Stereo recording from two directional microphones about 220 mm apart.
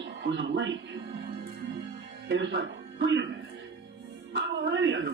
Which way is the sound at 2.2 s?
55° right (ahead or behind).